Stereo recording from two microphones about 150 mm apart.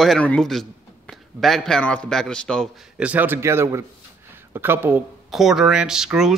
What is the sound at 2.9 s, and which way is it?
A man's voice, 10° right (ahead or behind).